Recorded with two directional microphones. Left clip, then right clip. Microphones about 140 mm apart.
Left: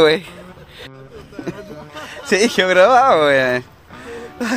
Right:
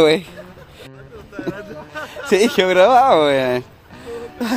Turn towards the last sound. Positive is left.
turn(degrees=0)  # may be behind; listen again after turning